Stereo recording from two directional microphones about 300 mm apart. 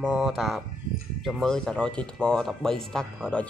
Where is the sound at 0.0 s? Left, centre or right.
Centre.